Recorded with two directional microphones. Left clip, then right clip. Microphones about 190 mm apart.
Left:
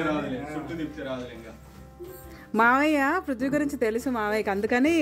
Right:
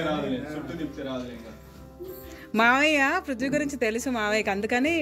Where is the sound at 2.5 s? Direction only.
20° left (ahead or behind).